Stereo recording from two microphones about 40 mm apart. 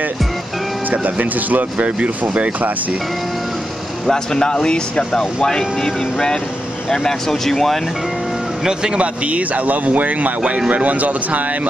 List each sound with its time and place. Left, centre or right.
0.9 s speech: right
1.9 s speech: right
4.1 s speech: centre
8.9 s speech: right